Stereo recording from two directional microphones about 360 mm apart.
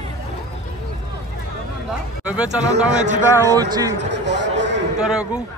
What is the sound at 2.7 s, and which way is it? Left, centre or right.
Speech, centre.